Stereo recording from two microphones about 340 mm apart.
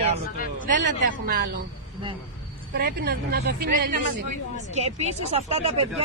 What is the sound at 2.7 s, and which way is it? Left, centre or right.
Speech, right.